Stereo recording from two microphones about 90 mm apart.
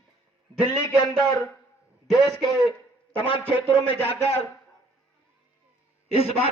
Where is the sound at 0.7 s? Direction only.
35° left (ahead or behind).